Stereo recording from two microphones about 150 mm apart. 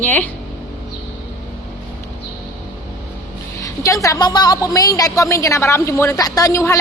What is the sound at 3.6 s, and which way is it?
A woman's voice, 20° left (ahead or behind).